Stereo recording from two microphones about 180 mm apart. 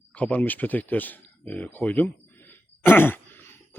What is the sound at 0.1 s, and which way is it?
Speech, 10° left (ahead or behind).